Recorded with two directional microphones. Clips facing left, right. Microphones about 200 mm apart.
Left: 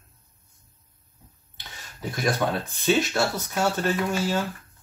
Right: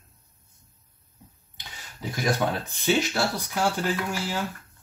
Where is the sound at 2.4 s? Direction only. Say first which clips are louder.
Left 2 dB; 10° right (ahead or behind).